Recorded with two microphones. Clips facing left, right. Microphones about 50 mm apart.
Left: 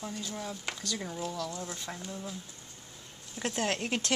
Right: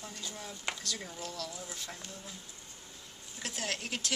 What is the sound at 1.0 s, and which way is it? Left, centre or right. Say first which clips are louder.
Speech: left 6 dB; centre.